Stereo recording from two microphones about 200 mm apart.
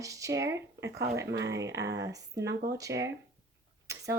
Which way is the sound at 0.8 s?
60° right (ahead or behind).